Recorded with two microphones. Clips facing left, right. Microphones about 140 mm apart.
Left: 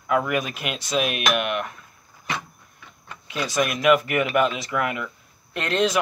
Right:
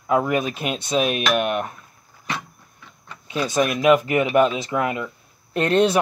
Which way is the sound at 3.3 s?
30° right (ahead or behind).